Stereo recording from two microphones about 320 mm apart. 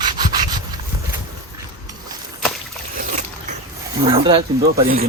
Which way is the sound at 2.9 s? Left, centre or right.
Right.